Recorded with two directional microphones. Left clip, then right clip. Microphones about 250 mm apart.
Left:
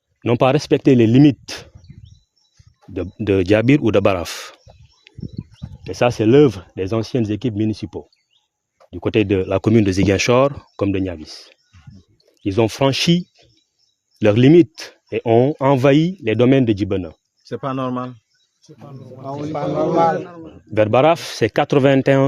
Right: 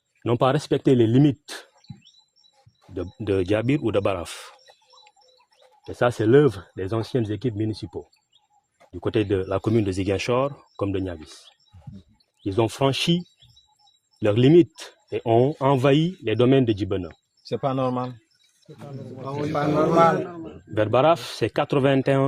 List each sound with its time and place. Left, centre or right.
0.2 s speech: left
2.9 s speech: left
5.8 s speech: left
17.5 s speech: left
19.4 s a man's voice: centre
20.7 s speech: left